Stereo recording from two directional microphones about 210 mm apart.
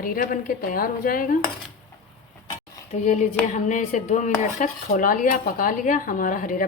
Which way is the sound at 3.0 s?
35° left (ahead or behind).